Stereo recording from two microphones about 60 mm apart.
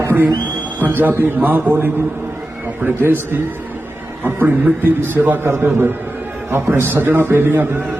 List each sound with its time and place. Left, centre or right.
0.8 s a man's voice: right